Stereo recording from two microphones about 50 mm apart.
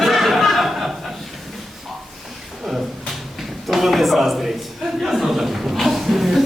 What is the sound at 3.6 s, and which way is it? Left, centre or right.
A man's voice, centre.